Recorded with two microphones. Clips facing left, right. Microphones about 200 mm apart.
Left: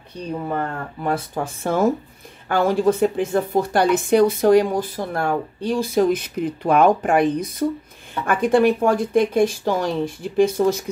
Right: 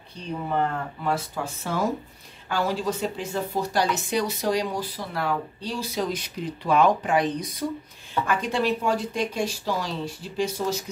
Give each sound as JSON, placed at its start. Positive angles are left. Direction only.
{"t": 1.0, "sound": "a woman's voice", "side_deg": 55}